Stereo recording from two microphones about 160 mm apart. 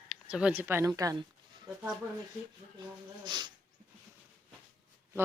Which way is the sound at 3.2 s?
30° right (ahead or behind).